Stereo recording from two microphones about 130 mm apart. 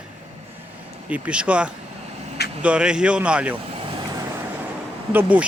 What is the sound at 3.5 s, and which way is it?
Vehicle, 45° right (ahead or behind).